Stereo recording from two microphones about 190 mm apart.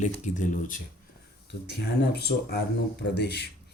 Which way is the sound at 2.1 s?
60° left (ahead or behind).